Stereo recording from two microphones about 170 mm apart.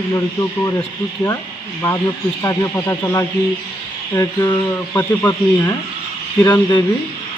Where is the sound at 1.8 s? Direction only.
20° left (ahead or behind).